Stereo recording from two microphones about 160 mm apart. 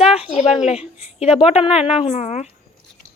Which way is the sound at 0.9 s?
40° left (ahead or behind).